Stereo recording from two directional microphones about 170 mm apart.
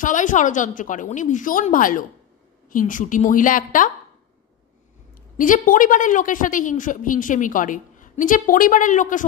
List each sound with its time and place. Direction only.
0.0 s a woman's voice: 50° left (ahead or behind)
5.4 s a woman's voice: 50° left (ahead or behind)